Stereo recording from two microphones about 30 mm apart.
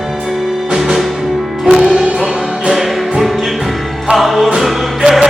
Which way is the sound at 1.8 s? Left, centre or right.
Right.